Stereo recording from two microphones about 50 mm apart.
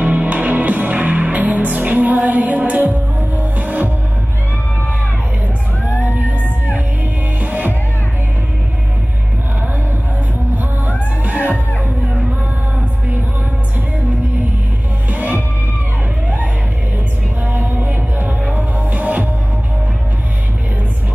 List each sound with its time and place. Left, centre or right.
0.0 s music: right
7.3 s music: right
10.5 s music: right
15.0 s music: right
17.4 s music: right